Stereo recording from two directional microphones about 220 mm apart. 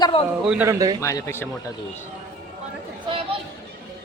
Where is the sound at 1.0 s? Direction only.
15° left (ahead or behind).